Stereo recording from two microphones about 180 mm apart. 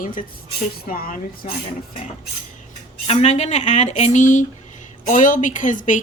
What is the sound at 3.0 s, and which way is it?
Speech, 35° left (ahead or behind).